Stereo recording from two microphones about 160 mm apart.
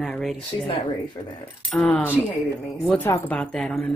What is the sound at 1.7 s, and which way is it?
Speech, 10° left (ahead or behind).